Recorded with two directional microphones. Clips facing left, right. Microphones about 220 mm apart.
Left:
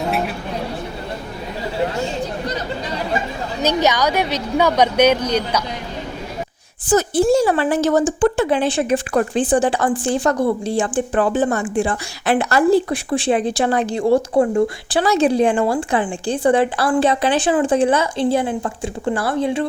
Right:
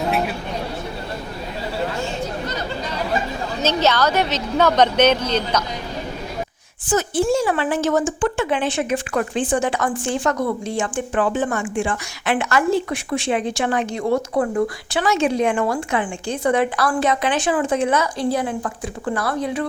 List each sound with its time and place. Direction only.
3.6 s a woman's voice: 15° left (ahead or behind)
6.8 s a woman's voice: 35° left (ahead or behind)